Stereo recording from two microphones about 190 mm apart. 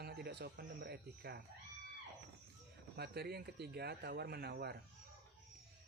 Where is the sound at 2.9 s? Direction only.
55° right (ahead or behind).